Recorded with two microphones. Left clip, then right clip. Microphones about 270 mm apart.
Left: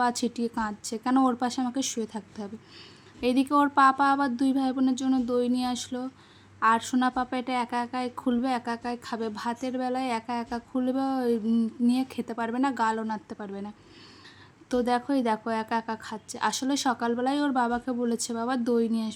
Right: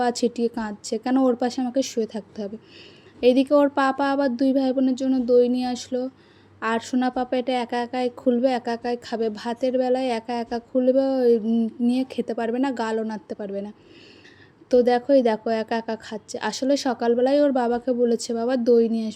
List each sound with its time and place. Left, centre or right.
0.0 s a woman's voice: centre
14.7 s a woman's voice: centre